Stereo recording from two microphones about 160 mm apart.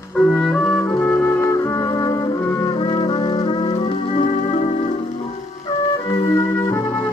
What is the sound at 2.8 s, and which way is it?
Music, 35° left (ahead or behind).